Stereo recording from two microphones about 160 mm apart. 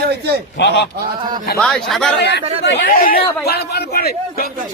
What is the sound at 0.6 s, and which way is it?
Speech, 90° left.